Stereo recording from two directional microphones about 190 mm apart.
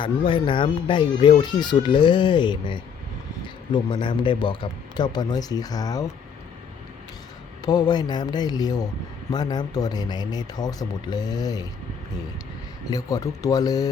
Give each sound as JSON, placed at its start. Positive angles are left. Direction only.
{"t": 0.0, "sound": "speech", "side_deg": 25}
{"t": 7.6, "sound": "speech", "side_deg": 20}
{"t": 12.9, "sound": "speech", "side_deg": 20}